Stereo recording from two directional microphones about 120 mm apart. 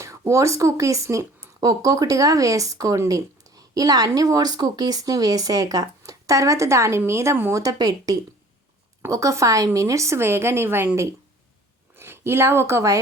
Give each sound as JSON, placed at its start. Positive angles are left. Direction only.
{"t": 0.0, "sound": "speech", "side_deg": -25}